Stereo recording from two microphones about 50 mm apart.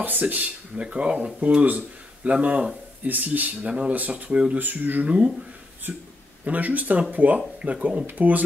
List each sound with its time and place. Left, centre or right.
0.0 s speech: right
0.7 s speech: right
4.6 s speech: right